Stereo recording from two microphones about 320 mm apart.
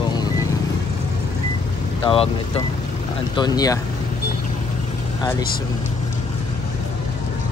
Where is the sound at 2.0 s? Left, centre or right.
Centre.